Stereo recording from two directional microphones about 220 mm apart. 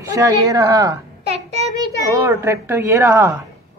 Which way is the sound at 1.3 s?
30° right (ahead or behind).